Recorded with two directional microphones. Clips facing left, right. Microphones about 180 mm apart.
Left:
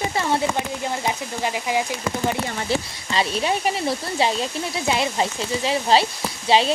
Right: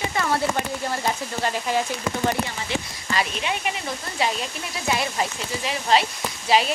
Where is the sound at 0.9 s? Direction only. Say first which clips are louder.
Right 1 dB; 15° left (ahead or behind).